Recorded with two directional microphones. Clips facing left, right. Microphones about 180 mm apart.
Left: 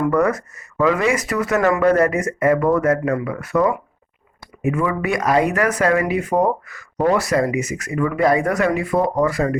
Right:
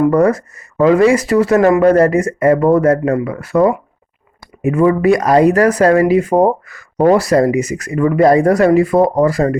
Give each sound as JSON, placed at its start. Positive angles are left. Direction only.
{"t": 0.0, "sound": "speech", "side_deg": -30}